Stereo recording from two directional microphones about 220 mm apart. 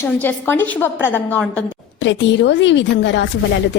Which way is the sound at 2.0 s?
55° left (ahead or behind).